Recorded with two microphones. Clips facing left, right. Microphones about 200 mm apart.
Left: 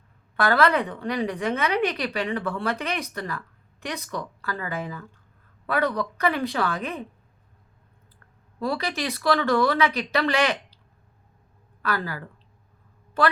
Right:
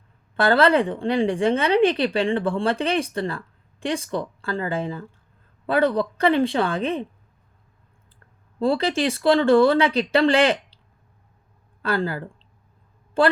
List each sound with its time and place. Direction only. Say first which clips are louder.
0.3 s speech: right 4 dB; 30° right (ahead or behind)
8.5 s speech: right 7 dB; 30° right (ahead or behind)
11.8 s speech: right 5 dB; 30° right (ahead or behind)